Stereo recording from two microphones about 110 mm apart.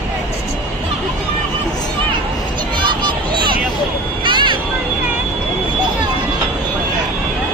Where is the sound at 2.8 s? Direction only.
45° right (ahead or behind).